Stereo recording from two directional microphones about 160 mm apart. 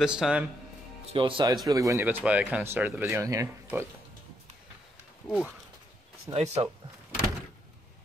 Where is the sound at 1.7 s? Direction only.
20° right (ahead or behind).